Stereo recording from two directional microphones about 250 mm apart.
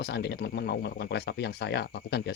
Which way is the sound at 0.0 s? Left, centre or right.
Left.